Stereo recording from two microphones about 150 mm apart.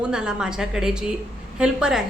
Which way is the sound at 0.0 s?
5° right (ahead or behind).